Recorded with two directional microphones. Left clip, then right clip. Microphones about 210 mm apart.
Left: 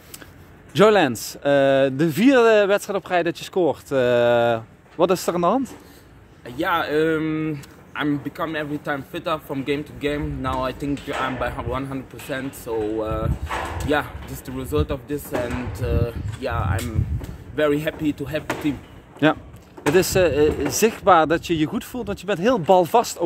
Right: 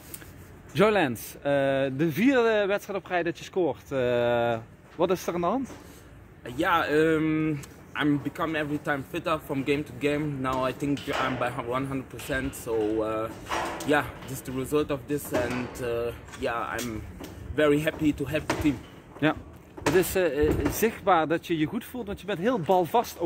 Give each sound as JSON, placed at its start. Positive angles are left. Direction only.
{"t": 0.7, "sound": "speech", "side_deg": 50}
{"t": 6.4, "sound": "speech", "side_deg": 5}
{"t": 19.2, "sound": "speech", "side_deg": 55}